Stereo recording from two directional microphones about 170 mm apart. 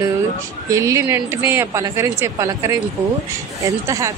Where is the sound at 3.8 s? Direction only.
20° right (ahead or behind).